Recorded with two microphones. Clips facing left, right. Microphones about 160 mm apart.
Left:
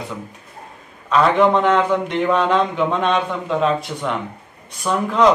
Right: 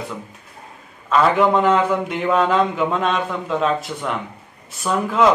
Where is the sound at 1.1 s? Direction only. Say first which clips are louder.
Left 1 dB; centre (ahead or behind).